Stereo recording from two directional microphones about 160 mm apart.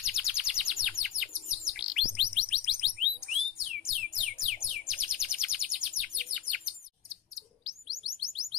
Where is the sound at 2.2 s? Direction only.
5° right (ahead or behind).